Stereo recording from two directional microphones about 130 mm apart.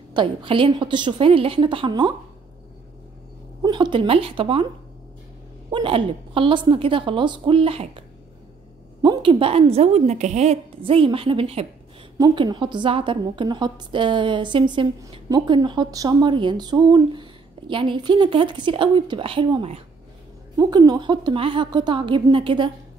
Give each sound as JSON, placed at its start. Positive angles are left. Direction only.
{"t": 0.1, "sound": "a woman's voice", "side_deg": -40}
{"t": 3.6, "sound": "a woman's voice", "side_deg": -35}
{"t": 5.7, "sound": "a woman's voice", "side_deg": -40}
{"t": 9.0, "sound": "a woman's voice", "side_deg": -40}
{"t": 12.2, "sound": "a woman's voice", "side_deg": -35}
{"t": 20.5, "sound": "a woman's voice", "side_deg": -30}